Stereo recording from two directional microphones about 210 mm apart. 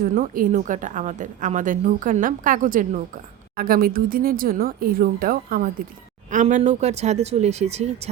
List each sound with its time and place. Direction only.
0.0 s a woman's voice: 40° right (ahead or behind)